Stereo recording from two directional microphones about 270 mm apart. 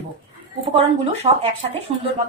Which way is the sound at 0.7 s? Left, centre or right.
Right.